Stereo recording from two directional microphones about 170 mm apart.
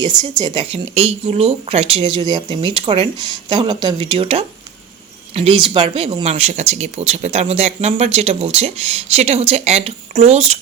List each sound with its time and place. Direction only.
0.0 s speech: 25° right (ahead or behind)